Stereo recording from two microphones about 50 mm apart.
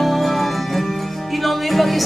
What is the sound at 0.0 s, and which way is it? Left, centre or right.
Music, centre.